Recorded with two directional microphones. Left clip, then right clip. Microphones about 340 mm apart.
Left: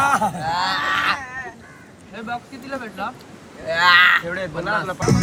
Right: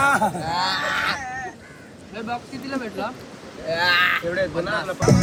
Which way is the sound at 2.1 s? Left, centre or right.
Left.